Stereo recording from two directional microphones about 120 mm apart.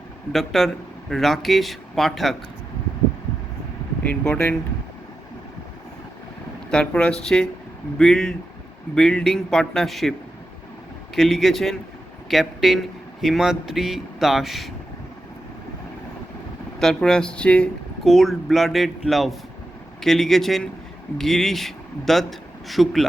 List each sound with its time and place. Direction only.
0.3 s speech: centre (ahead or behind)
4.0 s speech: 15° left (ahead or behind)
6.7 s speech: 5° left (ahead or behind)
16.8 s speech: 5° left (ahead or behind)